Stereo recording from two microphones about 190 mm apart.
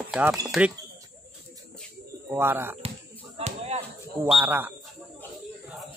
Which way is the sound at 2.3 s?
10° right (ahead or behind).